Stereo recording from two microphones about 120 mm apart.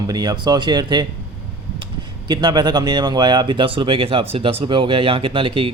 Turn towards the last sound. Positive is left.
turn(degrees=-45)  # may be behind; listen again after turning